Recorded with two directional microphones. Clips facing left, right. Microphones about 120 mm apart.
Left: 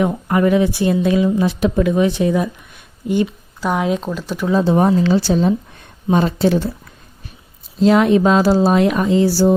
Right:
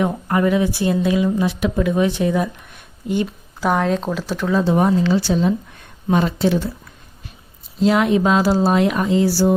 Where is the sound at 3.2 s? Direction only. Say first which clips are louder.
Right 1 dB; centre (ahead or behind).